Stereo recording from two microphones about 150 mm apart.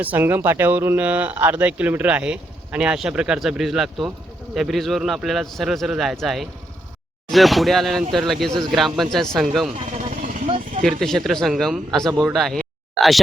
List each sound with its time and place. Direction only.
0.0 s a man's voice: 10° right (ahead or behind)
10.0 s a sound: 60° right (ahead or behind)
10.8 s a man's voice: centre (ahead or behind)